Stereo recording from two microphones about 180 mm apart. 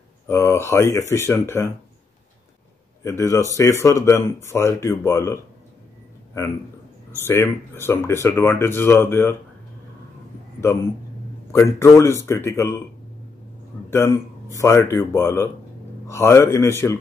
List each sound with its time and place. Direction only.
0.3 s speech: 15° left (ahead or behind)
3.0 s speech: 15° left (ahead or behind)
7.2 s speech: 15° left (ahead or behind)
11.5 s speech: 15° left (ahead or behind)
13.8 s speech: 15° left (ahead or behind)